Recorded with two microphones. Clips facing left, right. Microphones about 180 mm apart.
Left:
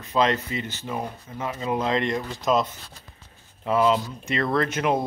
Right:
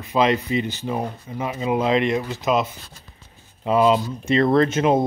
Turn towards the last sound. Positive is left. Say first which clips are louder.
# right 6 dB
turn(degrees=-25)  # may be behind; listen again after turning